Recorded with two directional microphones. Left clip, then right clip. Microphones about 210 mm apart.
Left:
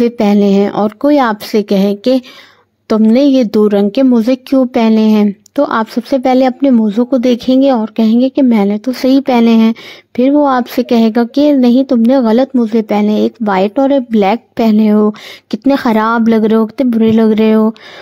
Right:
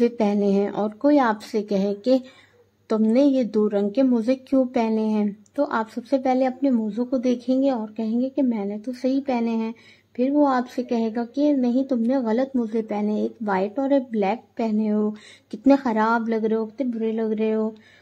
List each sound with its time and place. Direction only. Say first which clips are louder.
0.0 s speech: left 10 dB; 40° left (ahead or behind)